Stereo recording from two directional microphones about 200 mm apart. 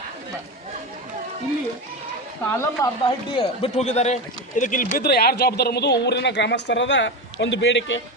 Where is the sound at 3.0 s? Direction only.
25° left (ahead or behind); by 8.0 s 65° left (ahead or behind).